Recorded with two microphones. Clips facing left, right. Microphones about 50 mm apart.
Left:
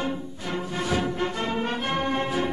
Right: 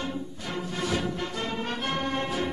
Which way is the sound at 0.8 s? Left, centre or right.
Left.